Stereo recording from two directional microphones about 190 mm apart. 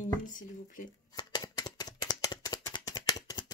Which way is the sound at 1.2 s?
20° left (ahead or behind).